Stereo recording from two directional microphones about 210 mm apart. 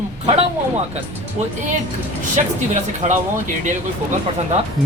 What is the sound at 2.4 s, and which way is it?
Speech, 35° right (ahead or behind).